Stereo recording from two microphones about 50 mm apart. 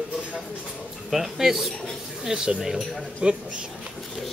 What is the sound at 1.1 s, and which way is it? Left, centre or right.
A man's voice, centre.